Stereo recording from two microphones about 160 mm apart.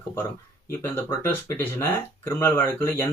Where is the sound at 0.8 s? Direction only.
15° left (ahead or behind).